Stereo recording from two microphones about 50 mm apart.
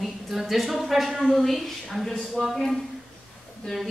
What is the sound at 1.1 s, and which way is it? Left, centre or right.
Speech, centre.